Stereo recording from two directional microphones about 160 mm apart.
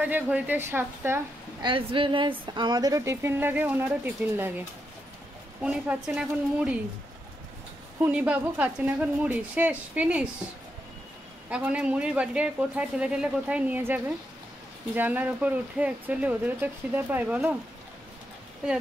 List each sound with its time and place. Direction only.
0.0 s speech: 10° right (ahead or behind)
1.6 s speech: 30° right (ahead or behind); by 4.6 s 10° right (ahead or behind)
5.6 s speech: 5° right (ahead or behind)
8.0 s speech: 10° right (ahead or behind)
11.5 s speech: 10° right (ahead or behind)